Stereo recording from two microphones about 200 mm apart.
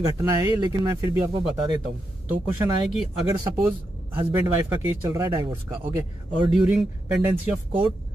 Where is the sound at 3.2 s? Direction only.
20° right (ahead or behind).